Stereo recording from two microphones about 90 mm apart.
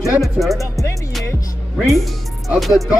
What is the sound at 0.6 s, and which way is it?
Music, 35° left (ahead or behind).